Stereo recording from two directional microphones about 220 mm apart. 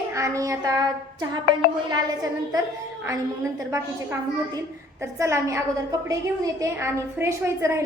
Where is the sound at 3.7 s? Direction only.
15° right (ahead or behind).